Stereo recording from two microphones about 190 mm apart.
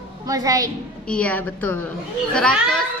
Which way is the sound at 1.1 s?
5° left (ahead or behind).